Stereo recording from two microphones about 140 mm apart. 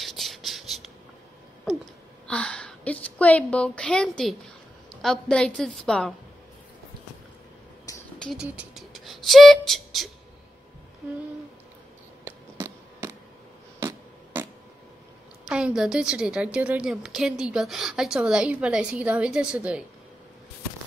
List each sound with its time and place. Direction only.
0.0 s a sound: centre (ahead or behind)
2.2 s a woman's voice: 5° left (ahead or behind)
8.2 s speech: centre (ahead or behind)
8.5 s beatboxing: centre (ahead or behind)
12.3 s a sound: 20° right (ahead or behind)
15.4 s a woman's voice: 5° right (ahead or behind)